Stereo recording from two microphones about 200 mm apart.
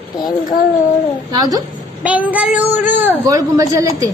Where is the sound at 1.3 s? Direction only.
20° right (ahead or behind).